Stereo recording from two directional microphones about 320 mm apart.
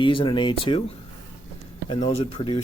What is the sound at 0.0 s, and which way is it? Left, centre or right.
Speech, centre.